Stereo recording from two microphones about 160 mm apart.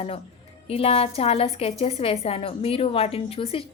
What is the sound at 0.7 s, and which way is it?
A woman's voice, 35° left (ahead or behind).